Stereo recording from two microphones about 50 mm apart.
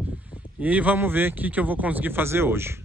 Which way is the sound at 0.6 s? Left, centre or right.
Right.